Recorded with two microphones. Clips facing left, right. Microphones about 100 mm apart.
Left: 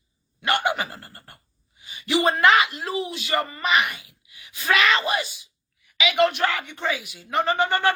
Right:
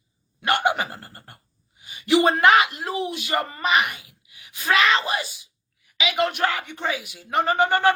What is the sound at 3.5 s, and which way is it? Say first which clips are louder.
Speech: right 2 dB; 35° right (ahead or behind).